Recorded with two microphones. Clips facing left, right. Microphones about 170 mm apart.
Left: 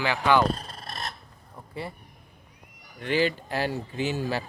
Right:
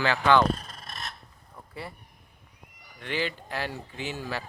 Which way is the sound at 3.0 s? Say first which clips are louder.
Left 6 dB; 35° left (ahead or behind).